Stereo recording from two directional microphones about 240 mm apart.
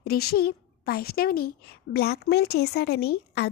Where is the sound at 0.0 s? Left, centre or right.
Left.